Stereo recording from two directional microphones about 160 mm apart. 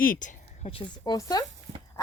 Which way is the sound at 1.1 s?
20° left (ahead or behind).